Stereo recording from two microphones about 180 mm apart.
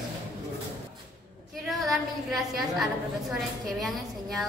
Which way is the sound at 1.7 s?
Centre (ahead or behind).